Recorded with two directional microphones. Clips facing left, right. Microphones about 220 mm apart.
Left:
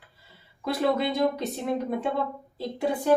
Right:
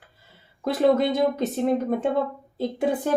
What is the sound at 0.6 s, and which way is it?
Speech, 50° right (ahead or behind).